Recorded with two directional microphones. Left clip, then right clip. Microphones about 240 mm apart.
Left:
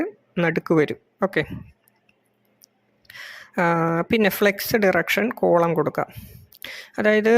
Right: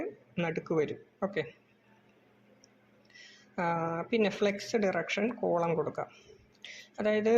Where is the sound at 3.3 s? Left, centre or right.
Left.